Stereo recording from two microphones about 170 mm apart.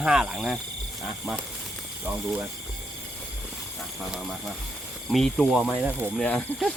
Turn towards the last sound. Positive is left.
turn(degrees=10)  # may be behind; listen again after turning